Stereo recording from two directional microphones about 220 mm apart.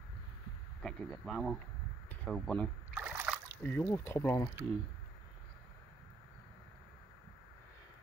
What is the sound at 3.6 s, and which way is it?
Speech, 10° left (ahead or behind).